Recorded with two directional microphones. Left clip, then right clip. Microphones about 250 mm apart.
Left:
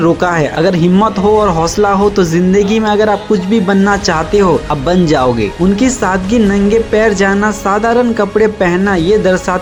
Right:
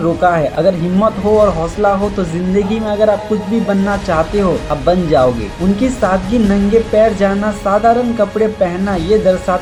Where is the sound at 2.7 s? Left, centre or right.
Left.